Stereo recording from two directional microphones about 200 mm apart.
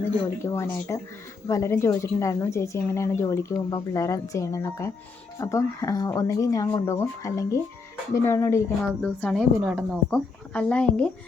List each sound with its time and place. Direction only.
0.4 s a woman's voice: 15° left (ahead or behind)
9.6 s speech: 5° right (ahead or behind)